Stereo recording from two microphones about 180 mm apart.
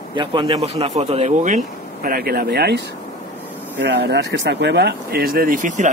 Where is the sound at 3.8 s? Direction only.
70° right (ahead or behind).